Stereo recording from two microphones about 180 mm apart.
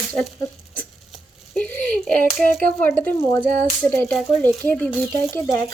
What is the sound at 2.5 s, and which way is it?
Speech, 5° left (ahead or behind).